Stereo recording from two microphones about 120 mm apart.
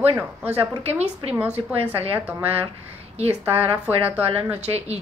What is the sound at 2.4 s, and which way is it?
Speech, 55° right (ahead or behind).